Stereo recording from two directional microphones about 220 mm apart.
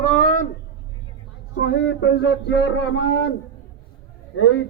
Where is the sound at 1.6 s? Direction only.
50° left (ahead or behind).